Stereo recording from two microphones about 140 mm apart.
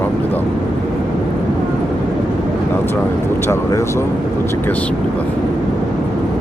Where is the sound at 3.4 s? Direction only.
20° left (ahead or behind).